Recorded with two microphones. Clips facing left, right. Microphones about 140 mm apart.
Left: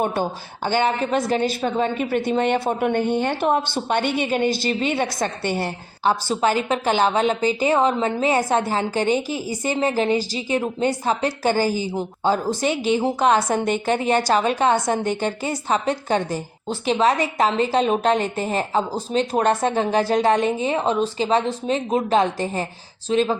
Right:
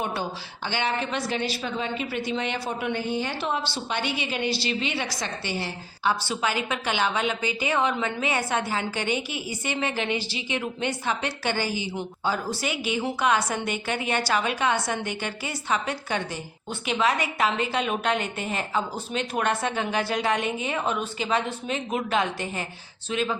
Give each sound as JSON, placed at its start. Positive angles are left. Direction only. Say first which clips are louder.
{"t": 0.0, "sound": "a woman's voice", "louder": "left 7 dB", "side_deg": 45}